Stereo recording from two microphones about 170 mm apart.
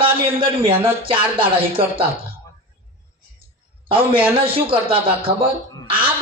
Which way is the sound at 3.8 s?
30° right (ahead or behind).